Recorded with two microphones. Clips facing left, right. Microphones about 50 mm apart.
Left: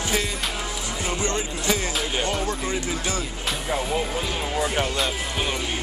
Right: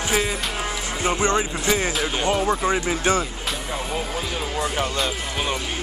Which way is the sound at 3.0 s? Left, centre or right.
Right.